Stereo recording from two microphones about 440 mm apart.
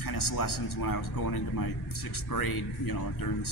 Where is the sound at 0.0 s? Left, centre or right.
Left.